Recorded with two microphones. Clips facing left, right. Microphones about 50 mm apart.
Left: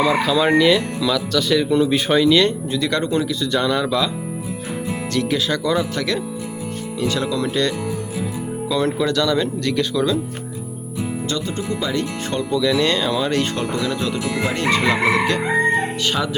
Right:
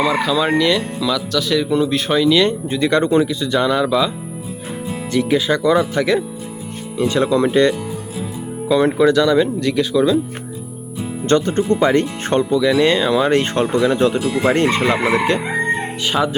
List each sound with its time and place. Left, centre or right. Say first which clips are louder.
0.0 s speech: even; centre
2.6 s speech: right 5 dB; right
3.5 s speech: right 3 dB; centre
5.1 s speech: right 5 dB; centre
8.7 s speech: right 7 dB; centre
11.3 s speech: right 14 dB; right
12.5 s speech: right 2 dB; centre
13.3 s speech: right 5 dB; right
16.0 s speech: right 3 dB; centre